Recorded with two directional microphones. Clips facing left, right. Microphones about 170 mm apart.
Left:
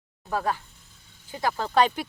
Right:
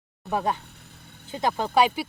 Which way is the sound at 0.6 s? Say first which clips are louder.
Right 7 dB; 65° right (ahead or behind).